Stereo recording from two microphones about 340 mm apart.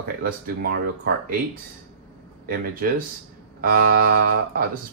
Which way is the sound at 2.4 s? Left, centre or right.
Right.